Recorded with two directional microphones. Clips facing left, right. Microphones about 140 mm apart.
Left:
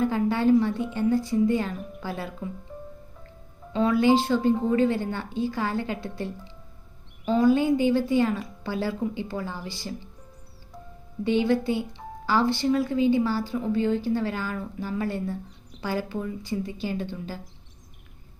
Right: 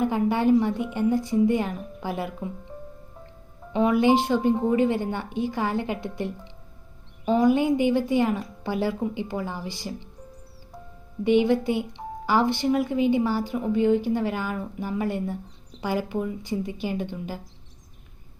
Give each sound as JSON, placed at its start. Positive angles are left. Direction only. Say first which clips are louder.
{"t": 0.0, "sound": "a woman's voice", "louder": "right 1 dB", "side_deg": -15}
{"t": 3.7, "sound": "a woman's voice", "louder": "right 1 dB", "side_deg": -20}
{"t": 11.2, "sound": "speech", "louder": "right 3 dB", "side_deg": -15}